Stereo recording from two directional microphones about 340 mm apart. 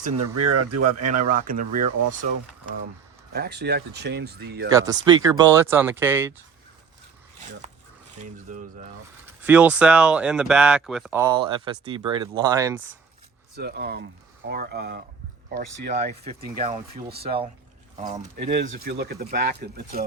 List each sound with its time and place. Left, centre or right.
0.3 s speech: right
1.2 s speech: right
3.3 s speech: right
4.7 s speech: centre
8.2 s speech: right
9.2 s speech: centre
13.6 s speech: right
17.2 s speech: centre